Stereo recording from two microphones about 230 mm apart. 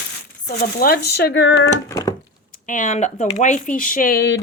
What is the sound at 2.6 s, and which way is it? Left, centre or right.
Speech, left.